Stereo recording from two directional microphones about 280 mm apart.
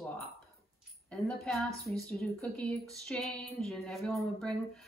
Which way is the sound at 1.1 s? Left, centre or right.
Centre.